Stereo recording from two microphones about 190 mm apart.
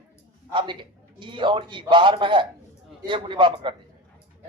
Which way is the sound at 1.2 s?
25° right (ahead or behind).